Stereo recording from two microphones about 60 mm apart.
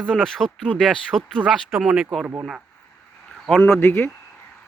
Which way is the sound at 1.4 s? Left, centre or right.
Centre.